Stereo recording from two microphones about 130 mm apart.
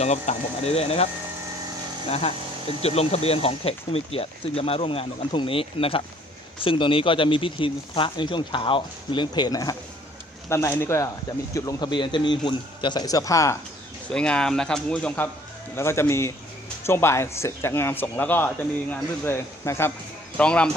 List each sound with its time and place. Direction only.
0.0 s speech: 60° left (ahead or behind)
2.0 s speech: 50° left (ahead or behind); by 13.6 s 25° left (ahead or behind)
14.1 s speech: 5° left (ahead or behind)
15.7 s speech: 20° left (ahead or behind)
20.3 s speech: 10° left (ahead or behind)